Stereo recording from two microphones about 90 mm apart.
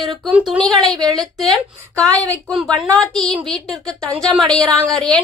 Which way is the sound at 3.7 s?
10° left (ahead or behind).